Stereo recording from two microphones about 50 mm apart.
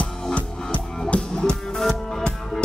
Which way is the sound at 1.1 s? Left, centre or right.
Left.